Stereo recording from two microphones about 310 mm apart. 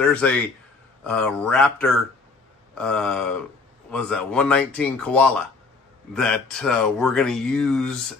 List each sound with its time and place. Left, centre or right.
0.0 s speech: centre